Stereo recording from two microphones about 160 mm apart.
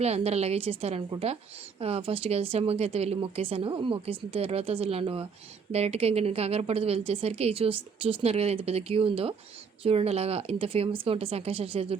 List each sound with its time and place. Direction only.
0.0 s a woman's voice: 40° right (ahead or behind)